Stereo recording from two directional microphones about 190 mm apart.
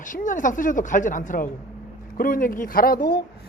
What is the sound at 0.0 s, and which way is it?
A woman's voice, 45° left (ahead or behind).